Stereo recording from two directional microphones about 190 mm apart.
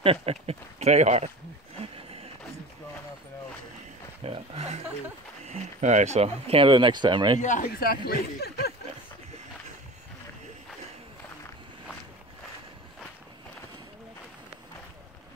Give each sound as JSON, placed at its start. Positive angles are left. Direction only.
{"t": 0.0, "sound": "speech", "side_deg": -30}
{"t": 1.8, "sound": "horse", "side_deg": -30}
{"t": 4.2, "sound": "a sound", "side_deg": -30}
{"t": 5.4, "sound": "speech", "side_deg": -35}
{"t": 7.4, "sound": "speech", "side_deg": 45}